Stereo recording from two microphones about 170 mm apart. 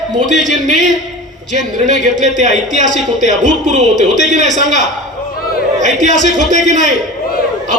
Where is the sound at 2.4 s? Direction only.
45° right (ahead or behind).